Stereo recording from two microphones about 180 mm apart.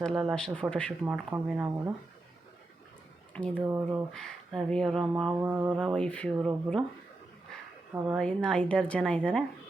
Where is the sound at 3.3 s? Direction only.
5° left (ahead or behind).